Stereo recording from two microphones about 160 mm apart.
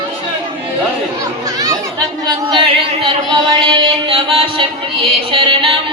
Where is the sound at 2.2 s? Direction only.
30° right (ahead or behind).